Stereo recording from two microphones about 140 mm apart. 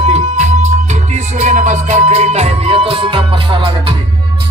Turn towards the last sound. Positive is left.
turn(degrees=-35)  # may be behind; listen again after turning